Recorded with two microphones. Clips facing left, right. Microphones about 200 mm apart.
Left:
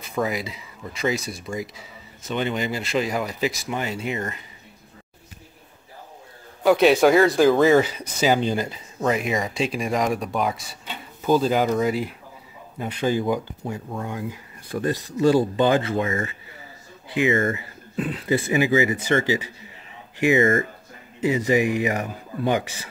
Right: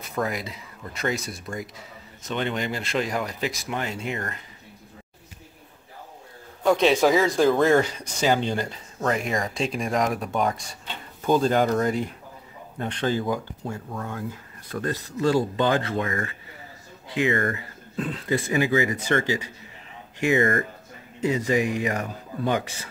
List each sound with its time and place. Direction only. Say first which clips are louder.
0.1 s speech: left 3 dB; centre (ahead or behind)
6.6 s speech: left 3 dB; 5° left (ahead or behind); by 17.6 s 20° left (ahead or behind)
17.9 s speech: left 3 dB; 5° left (ahead or behind)